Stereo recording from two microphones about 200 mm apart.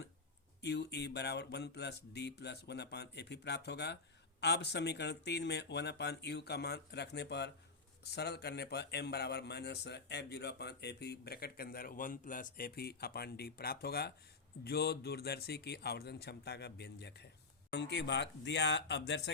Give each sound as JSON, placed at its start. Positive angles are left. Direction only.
{"t": 0.6, "sound": "a man's voice", "side_deg": 55}